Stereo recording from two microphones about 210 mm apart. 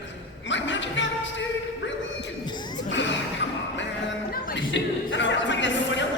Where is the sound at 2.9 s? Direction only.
60° left (ahead or behind).